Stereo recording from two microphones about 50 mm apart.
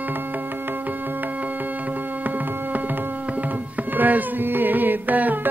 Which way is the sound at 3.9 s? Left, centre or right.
Right.